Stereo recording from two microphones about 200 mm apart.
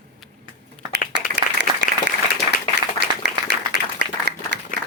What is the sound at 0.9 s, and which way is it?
Applause, 60° right (ahead or behind).